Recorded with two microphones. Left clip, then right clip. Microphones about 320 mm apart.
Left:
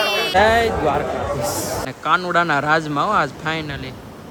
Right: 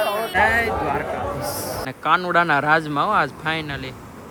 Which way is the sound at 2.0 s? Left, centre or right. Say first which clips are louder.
Even; centre.